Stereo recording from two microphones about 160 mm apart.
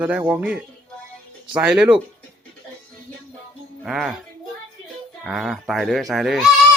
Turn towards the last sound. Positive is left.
turn(degrees=0)  # may be behind; listen again after turning